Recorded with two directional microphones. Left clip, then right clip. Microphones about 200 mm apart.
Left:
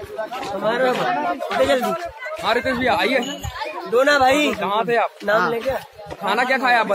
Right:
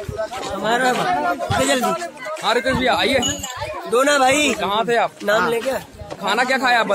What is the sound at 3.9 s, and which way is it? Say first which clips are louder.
Speech: even; 30° right (ahead or behind).